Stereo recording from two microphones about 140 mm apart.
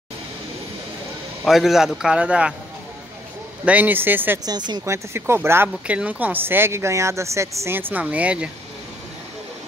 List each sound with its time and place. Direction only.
1.4 s a man's voice: centre (ahead or behind)
3.6 s a woman's voice: 10° right (ahead or behind)
4.5 s speech: 30° right (ahead or behind)
4.8 s a woman's voice: 20° right (ahead or behind)